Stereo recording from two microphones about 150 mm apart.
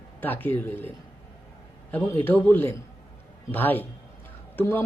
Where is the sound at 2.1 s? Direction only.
15° left (ahead or behind).